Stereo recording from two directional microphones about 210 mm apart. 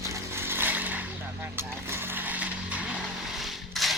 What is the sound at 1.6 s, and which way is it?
Vehicle, 10° right (ahead or behind).